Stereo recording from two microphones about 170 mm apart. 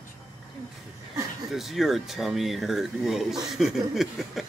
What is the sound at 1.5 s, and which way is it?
Speech, centre (ahead or behind).